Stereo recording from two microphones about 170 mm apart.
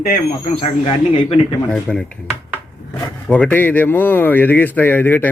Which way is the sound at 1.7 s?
5° left (ahead or behind).